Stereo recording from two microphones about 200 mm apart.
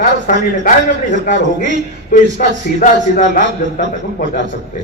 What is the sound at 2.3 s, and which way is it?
A man's voice, 40° left (ahead or behind).